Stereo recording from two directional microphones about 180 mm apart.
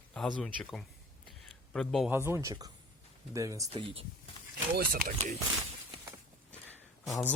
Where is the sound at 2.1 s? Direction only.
15° right (ahead or behind).